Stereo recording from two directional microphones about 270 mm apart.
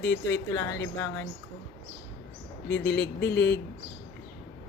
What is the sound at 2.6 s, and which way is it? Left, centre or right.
Speech, left.